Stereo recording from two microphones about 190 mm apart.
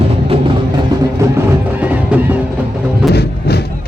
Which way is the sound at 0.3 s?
30° right (ahead or behind).